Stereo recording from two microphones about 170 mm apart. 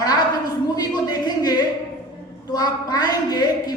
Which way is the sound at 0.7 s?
25° left (ahead or behind).